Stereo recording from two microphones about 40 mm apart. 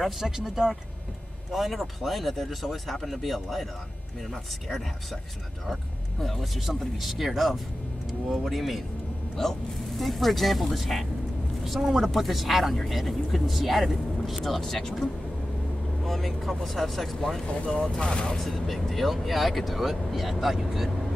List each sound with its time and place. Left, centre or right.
0.0 s speech: centre
16.0 s speech: centre
17.9 s speech: left
18.3 s speech: centre